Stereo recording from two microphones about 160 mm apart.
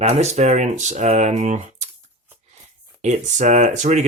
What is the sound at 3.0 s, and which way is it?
Speech, 50° right (ahead or behind).